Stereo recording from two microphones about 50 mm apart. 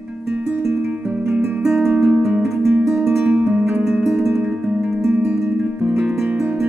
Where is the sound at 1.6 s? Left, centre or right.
Centre.